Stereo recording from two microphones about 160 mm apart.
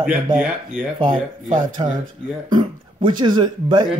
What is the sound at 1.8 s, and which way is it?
Speech, 35° right (ahead or behind).